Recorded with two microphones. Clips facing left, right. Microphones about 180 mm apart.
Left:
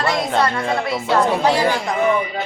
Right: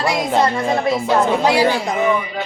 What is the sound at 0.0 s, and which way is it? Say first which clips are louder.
A child's voice: right 2 dB; 10° right (ahead or behind).